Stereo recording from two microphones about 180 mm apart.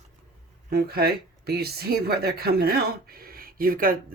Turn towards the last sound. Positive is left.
turn(degrees=-55)  # may be behind; listen again after turning